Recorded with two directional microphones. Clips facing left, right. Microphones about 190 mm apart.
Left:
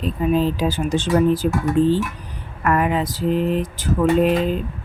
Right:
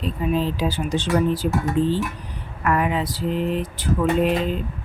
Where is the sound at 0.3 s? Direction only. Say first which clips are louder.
Left 3 dB; 45° left (ahead or behind).